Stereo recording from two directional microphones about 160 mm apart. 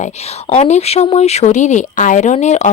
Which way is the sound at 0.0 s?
40° left (ahead or behind).